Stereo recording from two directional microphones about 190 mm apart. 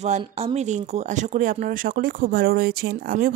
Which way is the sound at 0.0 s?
35° right (ahead or behind).